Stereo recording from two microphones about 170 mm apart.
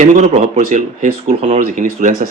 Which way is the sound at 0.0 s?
45° right (ahead or behind).